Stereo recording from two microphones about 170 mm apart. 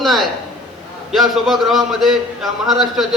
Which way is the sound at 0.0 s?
Centre (ahead or behind).